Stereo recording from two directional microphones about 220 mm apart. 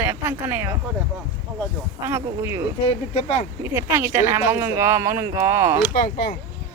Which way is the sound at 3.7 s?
10° right (ahead or behind).